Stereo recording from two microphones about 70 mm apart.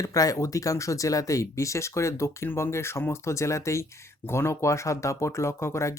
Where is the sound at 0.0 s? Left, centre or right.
Left.